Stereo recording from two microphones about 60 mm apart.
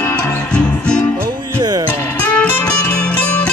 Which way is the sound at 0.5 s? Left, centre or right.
Centre.